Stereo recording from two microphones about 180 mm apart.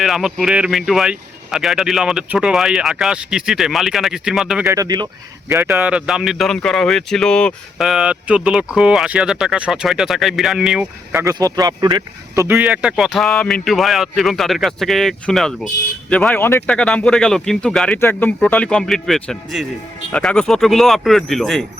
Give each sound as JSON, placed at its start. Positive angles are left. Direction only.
{"t": 0.0, "sound": "speech", "side_deg": 0}
{"t": 4.6, "sound": "speech", "side_deg": -15}